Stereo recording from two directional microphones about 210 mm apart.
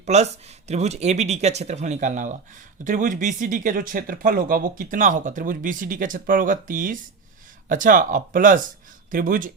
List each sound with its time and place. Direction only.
0.0 s speech: 30° right (ahead or behind)